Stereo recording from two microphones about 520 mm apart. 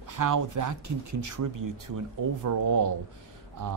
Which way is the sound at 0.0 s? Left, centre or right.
Right.